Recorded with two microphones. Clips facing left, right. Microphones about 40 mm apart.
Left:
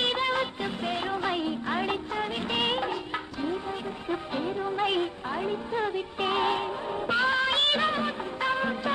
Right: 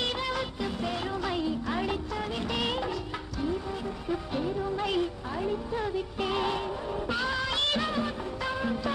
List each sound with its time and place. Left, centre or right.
0.0 s music: left
4.1 s music: left